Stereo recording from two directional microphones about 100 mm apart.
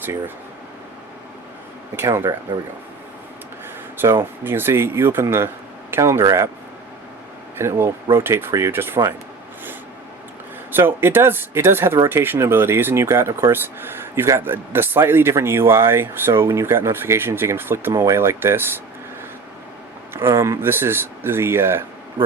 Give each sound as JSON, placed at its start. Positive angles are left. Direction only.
{"t": 2.0, "sound": "speech", "side_deg": -25}
{"t": 3.9, "sound": "speech", "side_deg": -25}
{"t": 7.5, "sound": "speech", "side_deg": -25}
{"t": 10.7, "sound": "speech", "side_deg": -20}
{"t": 17.9, "sound": "speech", "side_deg": -35}
{"t": 18.2, "sound": "speech", "side_deg": -25}
{"t": 20.1, "sound": "speech", "side_deg": -25}